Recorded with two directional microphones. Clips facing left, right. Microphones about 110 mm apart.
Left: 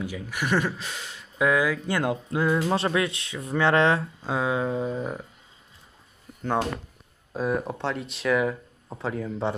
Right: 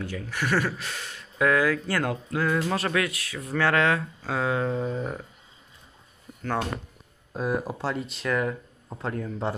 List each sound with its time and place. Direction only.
0.0 s speech: 15° left (ahead or behind); by 4.3 s 30° left (ahead or behind)
4.3 s speech: 15° left (ahead or behind)
7.3 s speech: centre (ahead or behind)